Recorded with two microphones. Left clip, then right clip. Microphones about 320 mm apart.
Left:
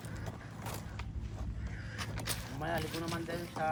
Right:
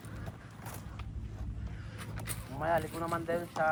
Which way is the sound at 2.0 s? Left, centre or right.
Centre.